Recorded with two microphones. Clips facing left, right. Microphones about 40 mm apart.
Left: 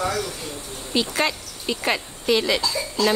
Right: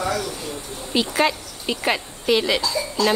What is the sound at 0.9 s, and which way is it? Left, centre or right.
Speech, centre.